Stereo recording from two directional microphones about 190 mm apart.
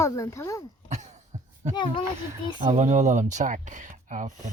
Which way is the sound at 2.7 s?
40° right (ahead or behind).